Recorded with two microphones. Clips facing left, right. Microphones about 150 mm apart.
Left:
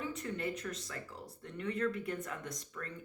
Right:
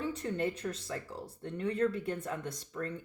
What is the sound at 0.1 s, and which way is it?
Speech, 35° right (ahead or behind).